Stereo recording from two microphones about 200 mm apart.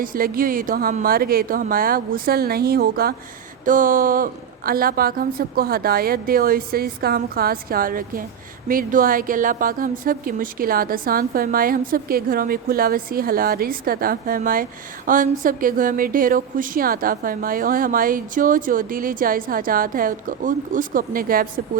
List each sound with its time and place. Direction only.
0.0 s a woman's voice: 45° right (ahead or behind)